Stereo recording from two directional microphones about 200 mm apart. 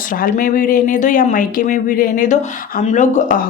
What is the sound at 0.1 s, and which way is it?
Speech, 45° left (ahead or behind).